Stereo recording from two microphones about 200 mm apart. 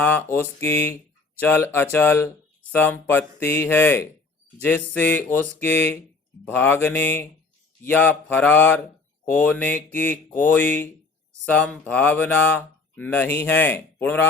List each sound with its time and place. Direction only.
0.0 s speech: 10° left (ahead or behind)